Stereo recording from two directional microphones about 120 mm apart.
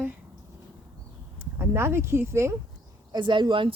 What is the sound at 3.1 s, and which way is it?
Speech, 40° right (ahead or behind).